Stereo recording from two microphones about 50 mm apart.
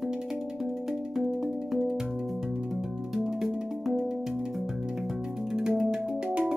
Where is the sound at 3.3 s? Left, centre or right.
Centre.